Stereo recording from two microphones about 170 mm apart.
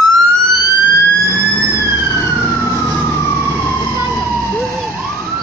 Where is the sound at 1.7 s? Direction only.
10° right (ahead or behind).